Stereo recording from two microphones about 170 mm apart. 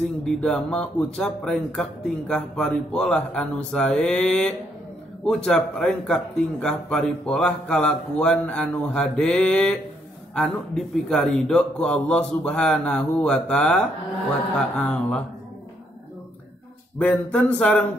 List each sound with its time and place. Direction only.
0.0 s speech: 5° left (ahead or behind)
17.0 s speech: 10° left (ahead or behind)